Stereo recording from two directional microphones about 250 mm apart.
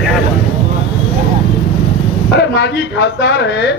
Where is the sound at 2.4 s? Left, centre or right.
Left.